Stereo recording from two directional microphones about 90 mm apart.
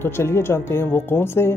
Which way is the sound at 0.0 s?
25° left (ahead or behind).